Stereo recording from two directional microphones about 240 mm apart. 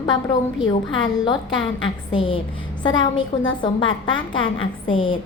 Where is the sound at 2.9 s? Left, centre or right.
Left.